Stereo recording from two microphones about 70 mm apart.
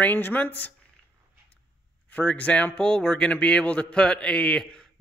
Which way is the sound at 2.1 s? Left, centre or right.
Centre.